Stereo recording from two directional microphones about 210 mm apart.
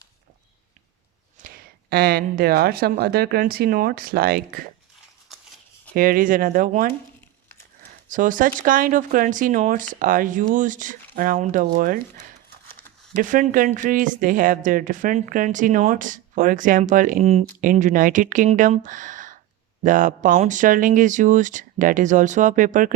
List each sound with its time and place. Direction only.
1.4 s speech: 45° right (ahead or behind)
5.9 s speech: 45° right (ahead or behind)
8.1 s speech: 40° right (ahead or behind)
13.2 s speech: 40° right (ahead or behind)